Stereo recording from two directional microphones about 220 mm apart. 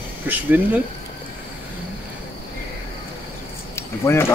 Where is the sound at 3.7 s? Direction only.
10° left (ahead or behind).